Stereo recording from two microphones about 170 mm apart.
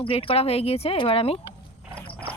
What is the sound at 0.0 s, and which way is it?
Speech, 35° left (ahead or behind).